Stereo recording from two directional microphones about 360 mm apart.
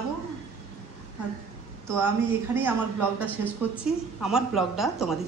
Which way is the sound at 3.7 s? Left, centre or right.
Centre.